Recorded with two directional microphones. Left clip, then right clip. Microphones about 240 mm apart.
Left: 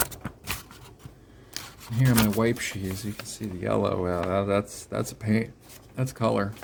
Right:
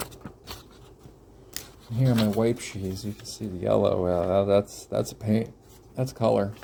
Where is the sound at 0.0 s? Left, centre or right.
Left.